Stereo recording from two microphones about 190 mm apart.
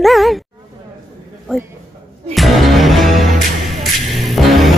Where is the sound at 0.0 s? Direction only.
Centre (ahead or behind).